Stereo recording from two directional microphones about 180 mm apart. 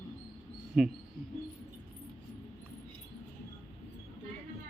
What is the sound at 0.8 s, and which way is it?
Speech, centre (ahead or behind).